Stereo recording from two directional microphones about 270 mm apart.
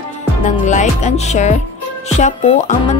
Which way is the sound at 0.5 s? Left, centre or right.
Left.